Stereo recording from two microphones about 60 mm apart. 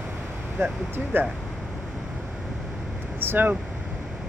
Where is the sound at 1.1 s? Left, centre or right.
Right.